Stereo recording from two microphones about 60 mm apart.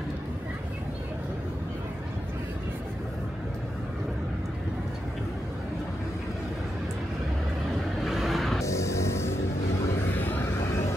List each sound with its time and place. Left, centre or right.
8.0 s vehicle: centre
8.6 s music: left
10.1 s vehicle: left